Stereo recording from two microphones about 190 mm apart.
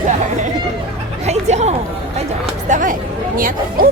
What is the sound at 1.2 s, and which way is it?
Speech, 35° right (ahead or behind).